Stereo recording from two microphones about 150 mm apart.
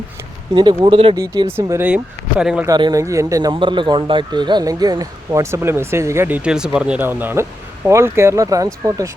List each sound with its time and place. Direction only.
0.5 s a man's voice: 30° right (ahead or behind)
1.1 s a man's voice: 25° right (ahead or behind)
2.4 s speech: 5° right (ahead or behind)
2.6 s a man's voice: 25° right (ahead or behind)